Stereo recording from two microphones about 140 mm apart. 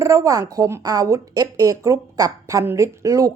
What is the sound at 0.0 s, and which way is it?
A woman's voice, 20° right (ahead or behind).